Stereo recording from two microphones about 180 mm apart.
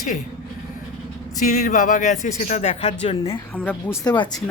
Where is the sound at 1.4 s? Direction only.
45° left (ahead or behind).